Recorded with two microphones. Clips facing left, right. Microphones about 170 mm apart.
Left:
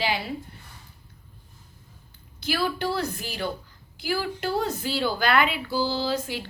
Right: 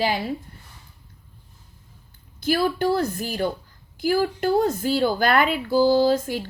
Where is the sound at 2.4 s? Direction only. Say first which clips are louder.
Right 6 dB; 50° right (ahead or behind).